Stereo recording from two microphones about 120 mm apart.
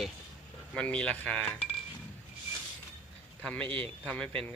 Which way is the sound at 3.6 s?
45° right (ahead or behind).